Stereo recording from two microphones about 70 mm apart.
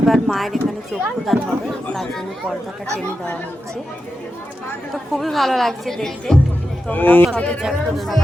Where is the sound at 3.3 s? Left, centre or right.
Left.